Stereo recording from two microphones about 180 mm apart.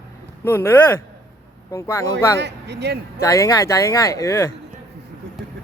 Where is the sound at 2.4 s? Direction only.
70° right (ahead or behind).